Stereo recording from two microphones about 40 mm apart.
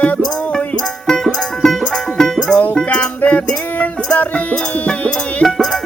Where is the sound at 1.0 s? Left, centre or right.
Centre.